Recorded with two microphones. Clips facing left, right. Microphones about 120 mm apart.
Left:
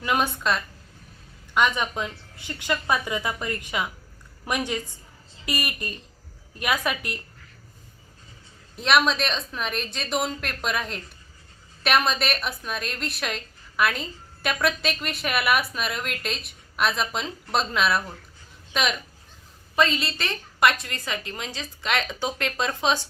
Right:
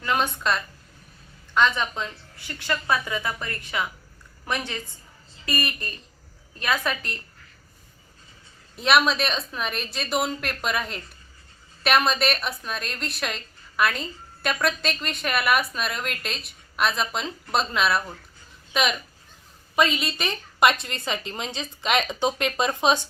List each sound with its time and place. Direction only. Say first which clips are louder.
0.0 s a woman's voice: even; 15° left (ahead or behind)
1.5 s a woman's voice: even; 15° left (ahead or behind)
8.7 s a woman's voice: right 1 dB; centre (ahead or behind)
19.7 s a woman's voice: even; 15° right (ahead or behind)